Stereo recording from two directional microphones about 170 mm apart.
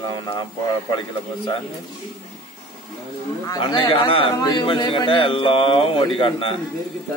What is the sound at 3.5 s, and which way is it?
A man's voice, 25° left (ahead or behind).